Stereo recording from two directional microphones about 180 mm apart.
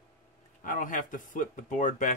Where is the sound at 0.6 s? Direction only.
45° left (ahead or behind).